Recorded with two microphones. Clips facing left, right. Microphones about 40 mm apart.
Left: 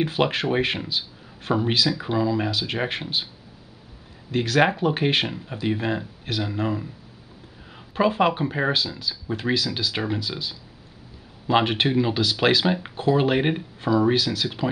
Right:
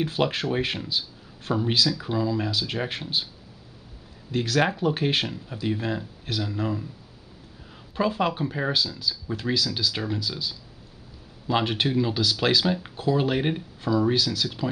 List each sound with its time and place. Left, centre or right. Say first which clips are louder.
0.0 s speech: left 3 dB; left
4.3 s speech: left 3 dB; centre